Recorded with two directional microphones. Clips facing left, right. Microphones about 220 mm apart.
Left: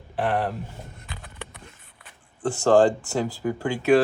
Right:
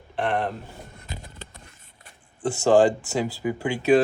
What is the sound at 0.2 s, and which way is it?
Speech, 5° left (ahead or behind).